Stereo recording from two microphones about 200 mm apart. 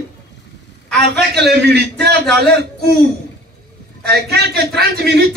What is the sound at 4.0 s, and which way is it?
A man's voice, 55° right (ahead or behind).